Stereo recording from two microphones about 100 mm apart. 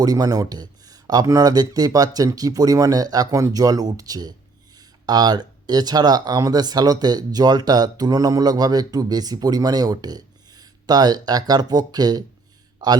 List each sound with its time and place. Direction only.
0.0 s speech: 40° right (ahead or behind)